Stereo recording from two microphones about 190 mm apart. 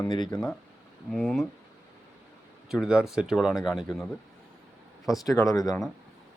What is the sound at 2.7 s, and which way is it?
Speech, 5° right (ahead or behind).